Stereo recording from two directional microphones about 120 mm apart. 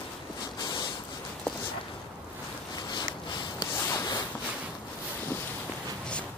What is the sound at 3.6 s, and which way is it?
Rub, 30° left (ahead or behind).